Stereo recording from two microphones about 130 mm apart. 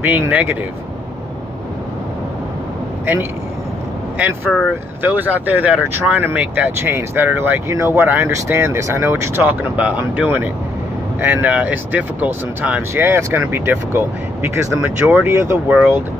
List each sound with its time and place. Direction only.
0.0 s speech: 15° right (ahead or behind)
4.5 s speech: centre (ahead or behind)
5.0 s speech: 10° right (ahead or behind)
15.7 s speech: 5° right (ahead or behind)